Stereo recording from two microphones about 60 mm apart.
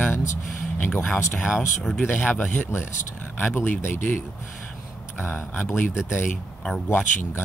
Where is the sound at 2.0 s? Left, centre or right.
Left.